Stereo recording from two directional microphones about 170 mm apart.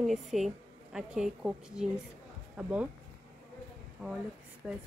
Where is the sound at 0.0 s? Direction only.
Centre (ahead or behind).